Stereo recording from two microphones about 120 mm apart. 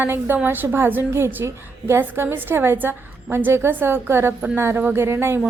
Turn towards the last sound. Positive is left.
turn(degrees=-20)  # may be behind; listen again after turning